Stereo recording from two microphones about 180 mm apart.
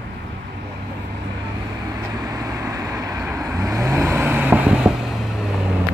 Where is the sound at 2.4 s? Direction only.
20° right (ahead or behind).